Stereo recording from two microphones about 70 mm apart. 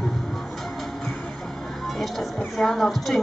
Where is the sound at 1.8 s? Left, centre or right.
Centre.